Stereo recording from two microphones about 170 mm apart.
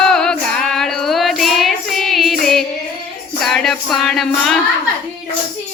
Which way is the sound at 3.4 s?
Centre (ahead or behind).